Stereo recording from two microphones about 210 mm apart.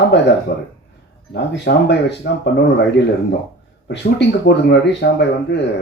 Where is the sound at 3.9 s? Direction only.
55° left (ahead or behind).